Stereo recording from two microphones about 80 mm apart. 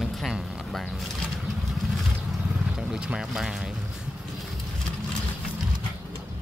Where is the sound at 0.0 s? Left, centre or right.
Centre.